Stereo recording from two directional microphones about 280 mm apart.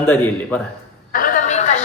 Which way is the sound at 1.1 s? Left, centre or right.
Left.